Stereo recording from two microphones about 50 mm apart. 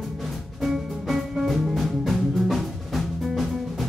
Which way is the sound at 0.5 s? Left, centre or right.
Centre.